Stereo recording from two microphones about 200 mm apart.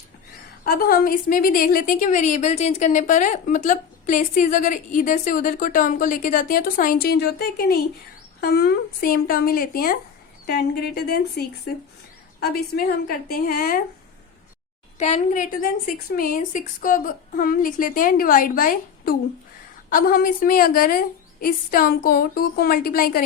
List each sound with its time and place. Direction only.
0.6 s a woman's voice: 50° left (ahead or behind)
12.5 s a woman's voice: 50° left (ahead or behind)
14.9 s a woman's voice: 35° left (ahead or behind)